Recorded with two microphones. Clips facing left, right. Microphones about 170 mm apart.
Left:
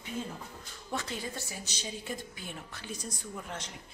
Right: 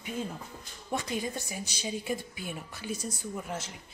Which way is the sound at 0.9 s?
15° right (ahead or behind).